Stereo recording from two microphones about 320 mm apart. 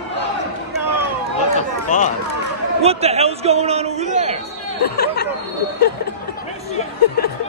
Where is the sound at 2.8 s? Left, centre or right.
Centre.